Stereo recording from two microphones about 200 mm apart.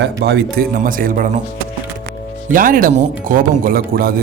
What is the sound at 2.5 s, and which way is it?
Speech, 45° right (ahead or behind).